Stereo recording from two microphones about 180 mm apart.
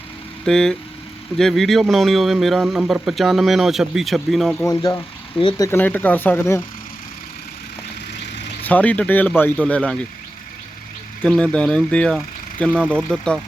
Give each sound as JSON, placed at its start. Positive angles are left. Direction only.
{"t": 0.4, "sound": "speech", "side_deg": 5}
{"t": 4.7, "sound": "speech", "side_deg": 20}
{"t": 5.4, "sound": "speech", "side_deg": 30}
{"t": 5.6, "sound": "speech", "side_deg": 10}
{"t": 8.6, "sound": "speech", "side_deg": 10}
{"t": 11.2, "sound": "speech", "side_deg": 5}